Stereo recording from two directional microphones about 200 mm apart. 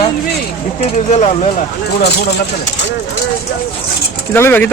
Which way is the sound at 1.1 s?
35° left (ahead or behind).